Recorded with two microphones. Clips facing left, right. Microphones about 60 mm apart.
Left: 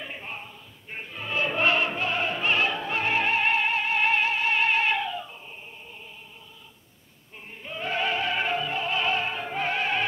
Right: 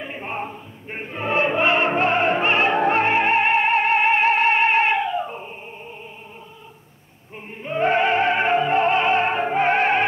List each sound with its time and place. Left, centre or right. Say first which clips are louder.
0.2 s choir: right 10 dB; right
1.5 s music: right 2 dB; right
1.9 s music: right 9 dB; right
5.2 s dog: right 12 dB; right
7.5 s music: right 11 dB; right